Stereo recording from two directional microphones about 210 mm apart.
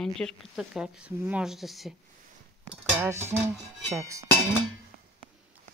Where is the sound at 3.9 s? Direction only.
15° right (ahead or behind).